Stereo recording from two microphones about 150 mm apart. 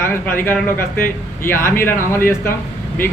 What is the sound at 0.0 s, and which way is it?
Speech, 15° left (ahead or behind).